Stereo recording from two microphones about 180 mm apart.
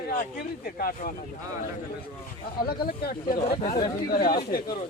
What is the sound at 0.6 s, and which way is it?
Speech, 55° left (ahead or behind).